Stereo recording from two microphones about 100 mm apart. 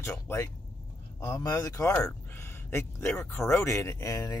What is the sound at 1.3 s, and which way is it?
Speech, 40° left (ahead or behind).